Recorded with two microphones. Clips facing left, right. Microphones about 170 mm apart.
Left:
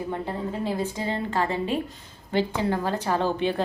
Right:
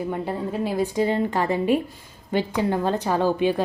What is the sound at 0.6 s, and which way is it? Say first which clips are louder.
A woman's voice: right 7 dB; 15° right (ahead or behind).